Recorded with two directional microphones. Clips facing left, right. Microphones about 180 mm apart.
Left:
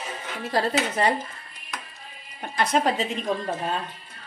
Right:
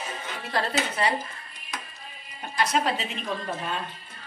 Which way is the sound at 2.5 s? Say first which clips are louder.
Left 2 dB; 60° left (ahead or behind).